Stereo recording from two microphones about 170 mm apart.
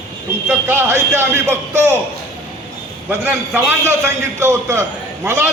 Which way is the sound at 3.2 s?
15° right (ahead or behind).